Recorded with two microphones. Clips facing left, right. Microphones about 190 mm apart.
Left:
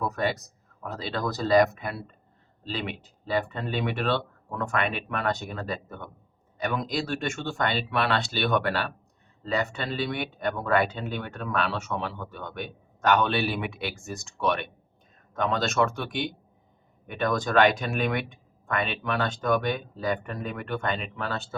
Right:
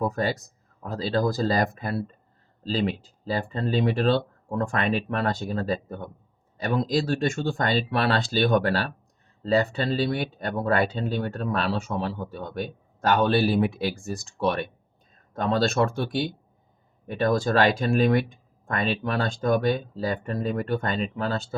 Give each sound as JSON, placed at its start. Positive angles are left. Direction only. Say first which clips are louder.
{"t": 0.1, "sound": "speech", "louder": "right 1 dB", "side_deg": -30}